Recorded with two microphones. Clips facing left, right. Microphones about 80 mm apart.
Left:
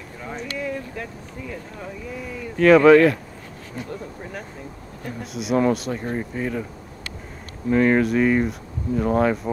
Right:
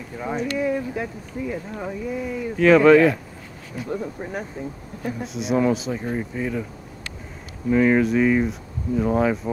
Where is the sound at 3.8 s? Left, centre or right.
Centre.